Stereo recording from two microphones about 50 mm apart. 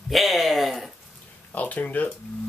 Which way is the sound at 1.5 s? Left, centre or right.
Left.